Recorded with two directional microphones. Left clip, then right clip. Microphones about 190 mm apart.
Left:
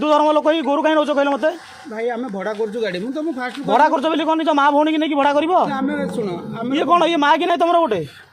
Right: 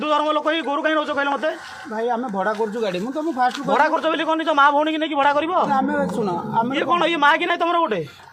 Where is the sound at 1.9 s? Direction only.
30° left (ahead or behind).